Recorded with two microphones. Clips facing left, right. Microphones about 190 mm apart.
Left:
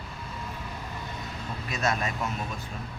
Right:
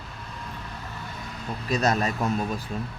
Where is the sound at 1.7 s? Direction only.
40° right (ahead or behind).